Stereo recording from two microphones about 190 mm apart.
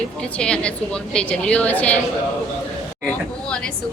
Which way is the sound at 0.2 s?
5° left (ahead or behind).